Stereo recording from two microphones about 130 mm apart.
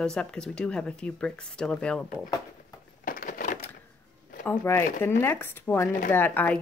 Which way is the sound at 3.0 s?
90° left.